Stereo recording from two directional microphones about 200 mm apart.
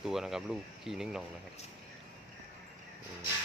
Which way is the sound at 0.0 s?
Centre (ahead or behind).